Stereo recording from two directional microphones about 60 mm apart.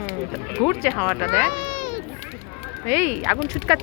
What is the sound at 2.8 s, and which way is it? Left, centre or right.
Speech, right.